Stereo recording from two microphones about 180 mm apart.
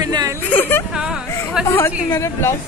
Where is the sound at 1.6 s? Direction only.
10° left (ahead or behind).